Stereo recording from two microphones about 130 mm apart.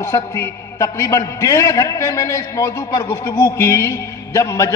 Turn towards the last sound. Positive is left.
turn(degrees=25)  # may be behind; listen again after turning